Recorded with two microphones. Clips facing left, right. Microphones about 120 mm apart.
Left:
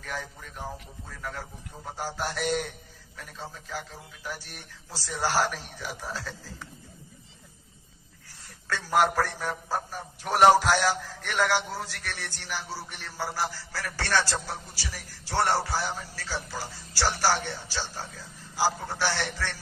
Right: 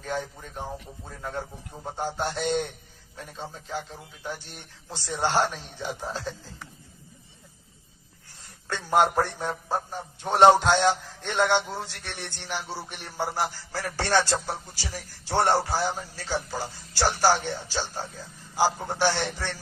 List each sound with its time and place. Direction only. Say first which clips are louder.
0.0 s a man's voice: right 5 dB; 30° right (ahead or behind)
8.3 s a man's voice: even; 25° right (ahead or behind)